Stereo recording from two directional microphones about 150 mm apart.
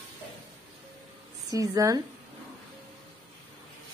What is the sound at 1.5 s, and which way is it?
Speech, 20° right (ahead or behind).